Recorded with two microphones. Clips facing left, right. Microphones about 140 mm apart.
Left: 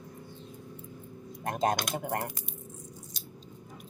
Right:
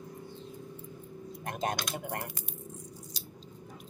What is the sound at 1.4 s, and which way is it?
Speech, 35° left (ahead or behind).